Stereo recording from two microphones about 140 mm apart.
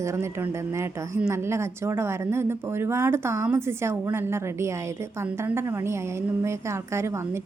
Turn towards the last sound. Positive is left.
turn(degrees=-20)  # may be behind; listen again after turning